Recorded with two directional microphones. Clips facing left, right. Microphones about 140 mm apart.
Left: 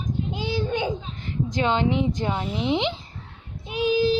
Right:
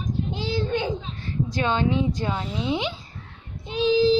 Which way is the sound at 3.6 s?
10° left (ahead or behind).